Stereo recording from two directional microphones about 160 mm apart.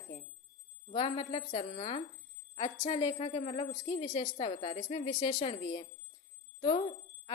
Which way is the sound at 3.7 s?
45° left (ahead or behind).